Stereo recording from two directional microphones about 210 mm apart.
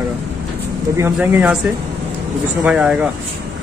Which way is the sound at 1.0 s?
5° right (ahead or behind).